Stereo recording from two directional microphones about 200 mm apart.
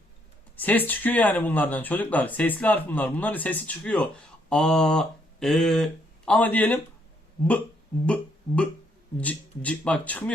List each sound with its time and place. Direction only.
0.5 s speech: 10° left (ahead or behind)
8.0 s speech: 5° left (ahead or behind)